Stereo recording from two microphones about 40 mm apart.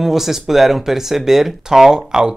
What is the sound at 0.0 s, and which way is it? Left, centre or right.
Speech, centre.